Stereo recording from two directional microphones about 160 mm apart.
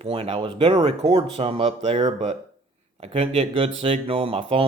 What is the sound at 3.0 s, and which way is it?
Speech, 40° right (ahead or behind).